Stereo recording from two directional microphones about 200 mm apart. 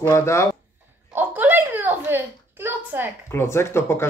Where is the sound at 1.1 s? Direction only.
10° right (ahead or behind).